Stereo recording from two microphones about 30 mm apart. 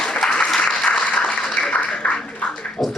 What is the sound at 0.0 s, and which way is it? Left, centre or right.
Applause, left.